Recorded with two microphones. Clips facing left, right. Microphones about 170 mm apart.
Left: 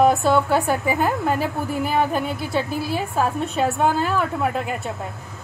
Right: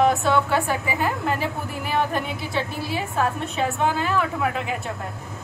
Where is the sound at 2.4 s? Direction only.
45° left (ahead or behind).